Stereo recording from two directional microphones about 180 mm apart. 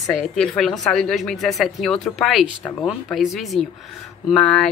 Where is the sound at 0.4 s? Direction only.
Centre (ahead or behind).